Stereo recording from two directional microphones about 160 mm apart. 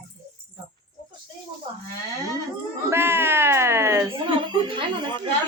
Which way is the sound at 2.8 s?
15° right (ahead or behind).